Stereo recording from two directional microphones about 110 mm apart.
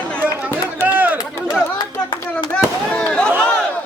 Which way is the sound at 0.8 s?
15° right (ahead or behind).